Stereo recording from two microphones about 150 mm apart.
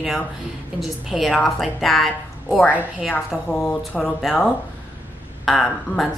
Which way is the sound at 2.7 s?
10° right (ahead or behind).